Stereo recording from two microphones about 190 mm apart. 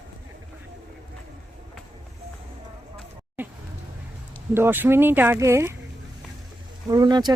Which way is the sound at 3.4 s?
10° right (ahead or behind).